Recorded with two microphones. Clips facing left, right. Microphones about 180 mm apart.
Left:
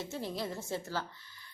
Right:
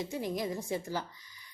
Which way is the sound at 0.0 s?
15° right (ahead or behind).